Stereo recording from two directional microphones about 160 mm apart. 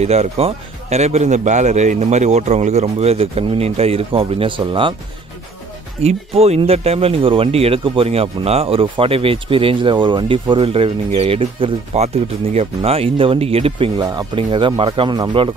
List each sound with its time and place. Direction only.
0.0 s speech: 40° right (ahead or behind)
6.0 s speech: 40° right (ahead or behind)